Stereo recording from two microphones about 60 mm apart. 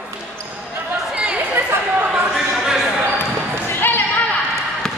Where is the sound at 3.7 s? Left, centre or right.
Left.